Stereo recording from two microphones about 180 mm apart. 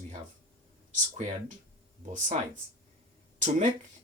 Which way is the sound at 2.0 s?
45° right (ahead or behind).